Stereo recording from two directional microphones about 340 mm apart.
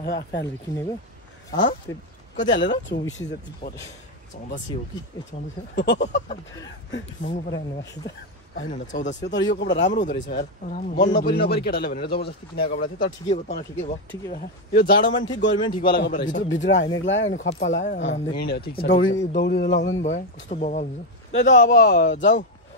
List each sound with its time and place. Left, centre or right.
0.0 s a man's voice: left
1.9 s a man's voice: centre
2.7 s a man's voice: left
5.8 s a man's voice: left
6.9 s a man's voice: left
15.5 s a man's voice: centre; by 20.0 s left
20.0 s a man's voice: left